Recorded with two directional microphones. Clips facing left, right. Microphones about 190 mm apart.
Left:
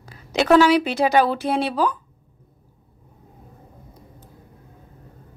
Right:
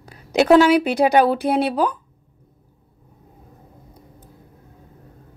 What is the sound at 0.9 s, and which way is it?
Speech, 60° right (ahead or behind).